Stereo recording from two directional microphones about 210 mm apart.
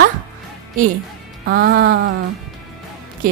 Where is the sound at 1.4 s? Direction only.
50° right (ahead or behind).